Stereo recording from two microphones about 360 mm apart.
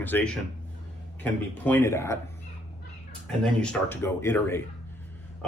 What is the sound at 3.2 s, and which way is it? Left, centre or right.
Speech, centre.